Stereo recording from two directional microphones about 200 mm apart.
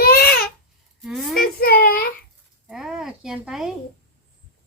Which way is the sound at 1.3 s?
50° left (ahead or behind).